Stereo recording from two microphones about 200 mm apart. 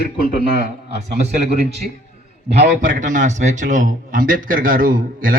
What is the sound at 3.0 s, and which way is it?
A man's voice, 40° right (ahead or behind).